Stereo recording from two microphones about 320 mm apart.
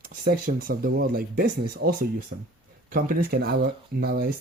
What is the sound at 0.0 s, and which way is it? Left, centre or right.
Speech, right.